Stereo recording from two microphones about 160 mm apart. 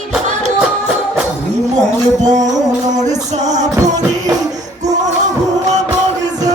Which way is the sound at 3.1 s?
50° right (ahead or behind).